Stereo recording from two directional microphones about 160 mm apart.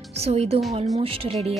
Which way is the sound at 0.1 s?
40° right (ahead or behind).